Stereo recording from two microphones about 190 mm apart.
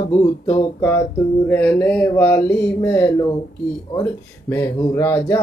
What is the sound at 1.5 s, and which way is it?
Speech, 10° left (ahead or behind).